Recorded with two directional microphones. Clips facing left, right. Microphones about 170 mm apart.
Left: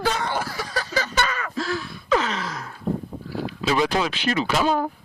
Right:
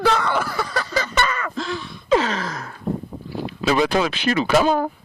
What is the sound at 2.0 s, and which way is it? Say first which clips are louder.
Gasp: right 4 dB; 30° right (ahead or behind).